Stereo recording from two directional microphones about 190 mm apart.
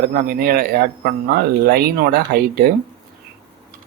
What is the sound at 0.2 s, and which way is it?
Speech, 50° right (ahead or behind).